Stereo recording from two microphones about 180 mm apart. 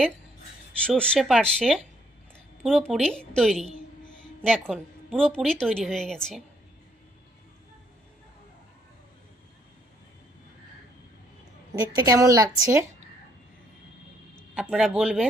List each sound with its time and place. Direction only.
0.9 s a woman's voice: 5° left (ahead or behind)
4.7 s a woman's voice: 5° left (ahead or behind)
11.8 s a woman's voice: 20° right (ahead or behind)
14.5 s a woman's voice: 5° right (ahead or behind)